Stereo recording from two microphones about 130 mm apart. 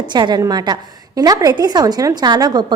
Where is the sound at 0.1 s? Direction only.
35° right (ahead or behind).